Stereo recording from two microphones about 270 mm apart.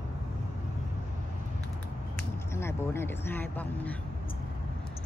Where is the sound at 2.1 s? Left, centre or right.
Centre.